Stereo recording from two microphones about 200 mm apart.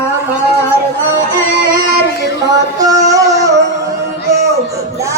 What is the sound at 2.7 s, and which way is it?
Music, 20° right (ahead or behind).